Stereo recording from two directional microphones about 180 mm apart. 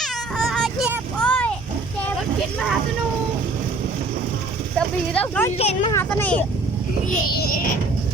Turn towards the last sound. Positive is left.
turn(degrees=50)  # may be behind; listen again after turning